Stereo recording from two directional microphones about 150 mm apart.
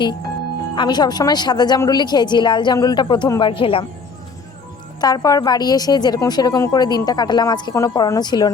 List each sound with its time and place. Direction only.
0.8 s a woman's voice: 30° left (ahead or behind)
4.9 s a woman's voice: 25° left (ahead or behind)